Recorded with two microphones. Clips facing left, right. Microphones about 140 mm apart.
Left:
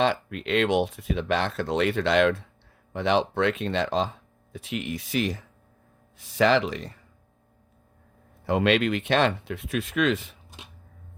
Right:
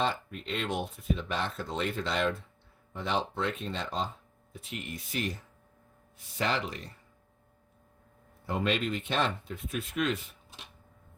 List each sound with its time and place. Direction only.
0.0 s speech: 90° left
8.4 s speech: 85° left